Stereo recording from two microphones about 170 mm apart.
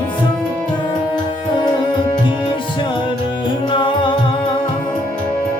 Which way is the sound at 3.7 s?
30° left (ahead or behind).